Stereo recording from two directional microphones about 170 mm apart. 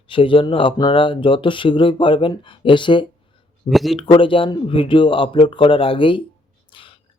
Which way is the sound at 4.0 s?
30° left (ahead or behind).